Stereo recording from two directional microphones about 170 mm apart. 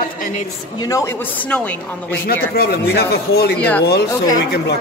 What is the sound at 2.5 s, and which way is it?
Speech, 70° left (ahead or behind).